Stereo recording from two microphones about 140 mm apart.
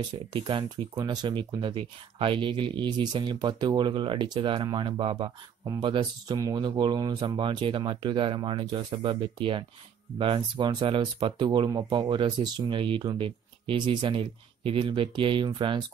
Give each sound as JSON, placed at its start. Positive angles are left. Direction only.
{"t": 0.3, "sound": "speech", "side_deg": -35}